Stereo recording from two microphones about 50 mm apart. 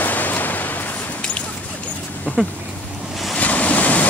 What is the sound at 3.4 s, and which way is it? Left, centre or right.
Waves, left.